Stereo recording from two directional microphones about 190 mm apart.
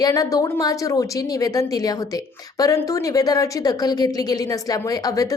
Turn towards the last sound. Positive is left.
turn(degrees=20)  # may be behind; listen again after turning